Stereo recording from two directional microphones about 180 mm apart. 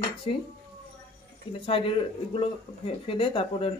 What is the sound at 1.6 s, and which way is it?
Speech, 30° left (ahead or behind).